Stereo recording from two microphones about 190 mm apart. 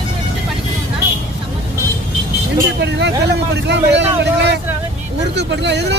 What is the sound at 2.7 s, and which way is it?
A man's voice, 65° right (ahead or behind).